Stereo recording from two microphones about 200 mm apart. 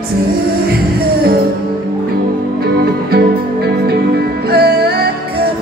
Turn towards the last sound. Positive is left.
turn(degrees=-55)  # may be behind; listen again after turning